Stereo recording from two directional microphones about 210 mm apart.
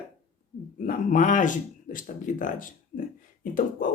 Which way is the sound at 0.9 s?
40° left (ahead or behind).